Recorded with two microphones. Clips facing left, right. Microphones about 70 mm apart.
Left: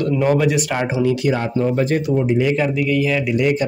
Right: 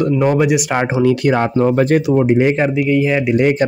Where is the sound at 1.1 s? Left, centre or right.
Right.